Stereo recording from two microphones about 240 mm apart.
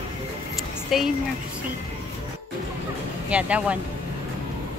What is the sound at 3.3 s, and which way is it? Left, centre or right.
Speech, centre.